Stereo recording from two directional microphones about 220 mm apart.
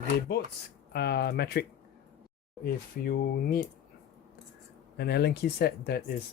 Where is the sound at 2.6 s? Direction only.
45° left (ahead or behind).